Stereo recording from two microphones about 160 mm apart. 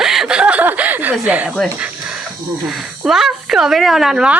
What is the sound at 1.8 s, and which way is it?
Snake, 5° right (ahead or behind).